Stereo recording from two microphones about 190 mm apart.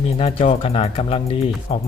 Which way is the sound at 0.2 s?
35° left (ahead or behind).